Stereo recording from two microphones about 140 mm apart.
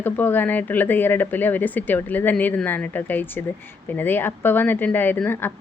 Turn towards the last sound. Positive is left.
turn(degrees=15)  # may be behind; listen again after turning